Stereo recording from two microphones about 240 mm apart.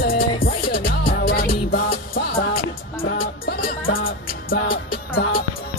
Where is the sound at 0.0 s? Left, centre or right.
Left.